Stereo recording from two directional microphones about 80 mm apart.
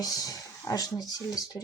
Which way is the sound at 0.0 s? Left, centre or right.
Left.